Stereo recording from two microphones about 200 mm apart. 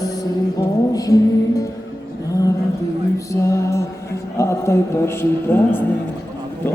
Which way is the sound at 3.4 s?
15° left (ahead or behind).